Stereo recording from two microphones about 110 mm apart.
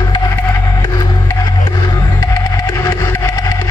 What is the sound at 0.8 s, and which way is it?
Music, 35° left (ahead or behind).